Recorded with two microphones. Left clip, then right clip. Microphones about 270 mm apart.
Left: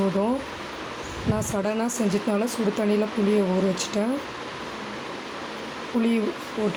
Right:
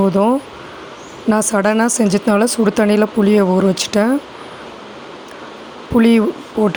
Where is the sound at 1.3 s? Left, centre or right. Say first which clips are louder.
Right 12 dB; right.